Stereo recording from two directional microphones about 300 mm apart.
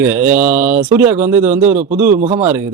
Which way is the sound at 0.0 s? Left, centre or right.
Centre.